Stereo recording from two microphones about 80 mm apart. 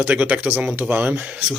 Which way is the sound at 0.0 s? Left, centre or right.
Right.